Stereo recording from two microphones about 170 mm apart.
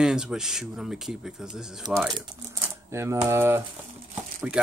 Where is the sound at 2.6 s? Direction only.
15° right (ahead or behind).